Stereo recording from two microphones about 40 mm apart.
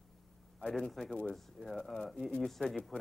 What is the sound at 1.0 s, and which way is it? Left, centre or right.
Speech, centre.